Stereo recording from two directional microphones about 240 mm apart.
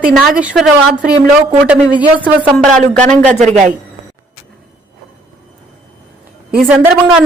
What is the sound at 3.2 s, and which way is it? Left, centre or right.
Speech, right.